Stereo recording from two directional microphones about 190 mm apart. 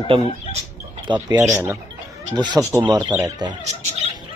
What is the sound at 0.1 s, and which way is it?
Speech, 30° right (ahead or behind).